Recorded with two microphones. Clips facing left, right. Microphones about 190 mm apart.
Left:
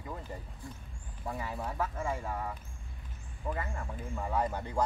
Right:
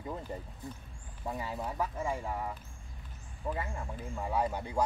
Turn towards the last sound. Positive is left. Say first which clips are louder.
# even
turn(degrees=-10)  # may be behind; listen again after turning